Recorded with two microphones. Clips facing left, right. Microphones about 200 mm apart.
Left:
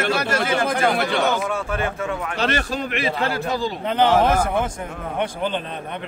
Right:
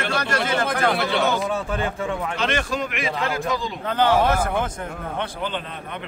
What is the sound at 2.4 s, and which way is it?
A man's voice, 35° left (ahead or behind).